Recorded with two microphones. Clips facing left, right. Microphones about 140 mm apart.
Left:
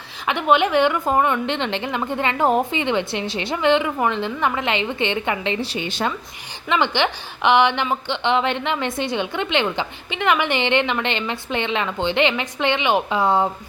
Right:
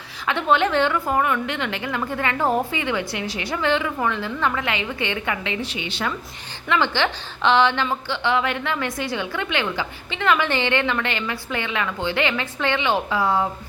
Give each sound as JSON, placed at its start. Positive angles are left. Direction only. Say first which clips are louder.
{"t": 0.3, "sound": "a woman's voice", "louder": "left 2 dB", "side_deg": 15}
{"t": 6.7, "sound": "a woman's voice", "louder": "left 1 dB", "side_deg": 20}